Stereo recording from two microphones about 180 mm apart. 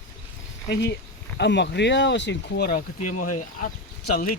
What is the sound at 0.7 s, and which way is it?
Speech, 65° left (ahead or behind).